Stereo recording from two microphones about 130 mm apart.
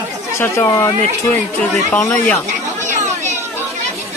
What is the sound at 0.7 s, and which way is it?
Speech, 30° left (ahead or behind).